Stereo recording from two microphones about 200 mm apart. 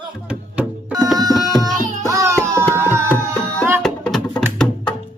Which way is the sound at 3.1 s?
10° left (ahead or behind).